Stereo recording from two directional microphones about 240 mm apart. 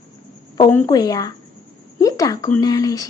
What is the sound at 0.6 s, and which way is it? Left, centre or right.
A woman's voice, centre.